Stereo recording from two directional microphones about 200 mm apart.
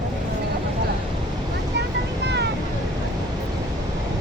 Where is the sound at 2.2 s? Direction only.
60° right (ahead or behind).